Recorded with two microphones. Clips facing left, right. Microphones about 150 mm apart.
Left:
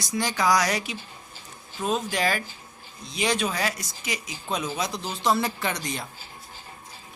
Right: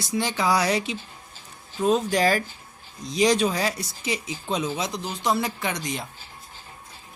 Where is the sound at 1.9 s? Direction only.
40° right (ahead or behind); by 6.0 s 20° right (ahead or behind).